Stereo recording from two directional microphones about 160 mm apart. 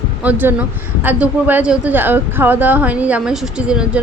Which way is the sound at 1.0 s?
10° right (ahead or behind).